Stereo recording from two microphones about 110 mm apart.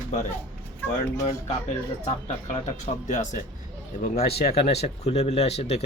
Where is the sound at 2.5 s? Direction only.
90° left.